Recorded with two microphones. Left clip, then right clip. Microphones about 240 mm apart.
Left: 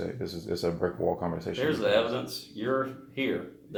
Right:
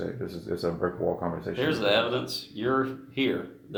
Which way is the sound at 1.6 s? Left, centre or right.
Right.